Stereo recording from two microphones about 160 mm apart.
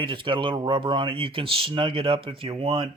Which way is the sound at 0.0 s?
30° right (ahead or behind).